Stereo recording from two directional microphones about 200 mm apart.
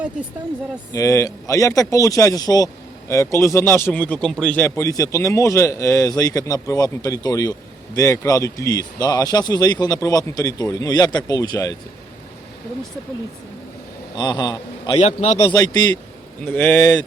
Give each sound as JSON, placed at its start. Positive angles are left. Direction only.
{"t": 0.9, "sound": "a man's voice", "side_deg": 15}
{"t": 14.2, "sound": "a man's voice", "side_deg": 20}
{"t": 15.0, "sound": "a man's voice", "side_deg": 30}
{"t": 15.5, "sound": "a man's voice", "side_deg": 20}